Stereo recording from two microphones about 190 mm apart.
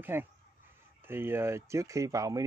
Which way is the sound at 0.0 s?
10° right (ahead or behind).